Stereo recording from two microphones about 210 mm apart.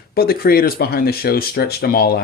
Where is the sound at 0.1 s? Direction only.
45° left (ahead or behind).